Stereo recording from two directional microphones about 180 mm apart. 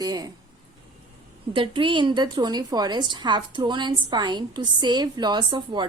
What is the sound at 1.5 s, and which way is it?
A woman's voice, 25° right (ahead or behind).